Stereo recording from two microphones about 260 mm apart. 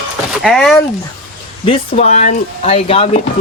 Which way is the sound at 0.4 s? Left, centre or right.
Centre.